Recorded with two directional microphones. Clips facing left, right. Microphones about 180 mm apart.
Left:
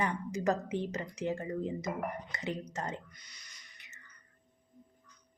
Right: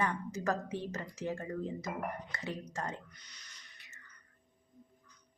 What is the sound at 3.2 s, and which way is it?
Music, 10° left (ahead or behind).